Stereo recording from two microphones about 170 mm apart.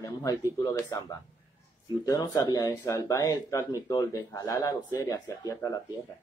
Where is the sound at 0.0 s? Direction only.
25° left (ahead or behind).